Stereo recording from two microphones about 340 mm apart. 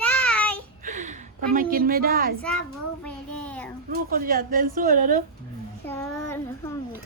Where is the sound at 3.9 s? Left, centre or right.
Right.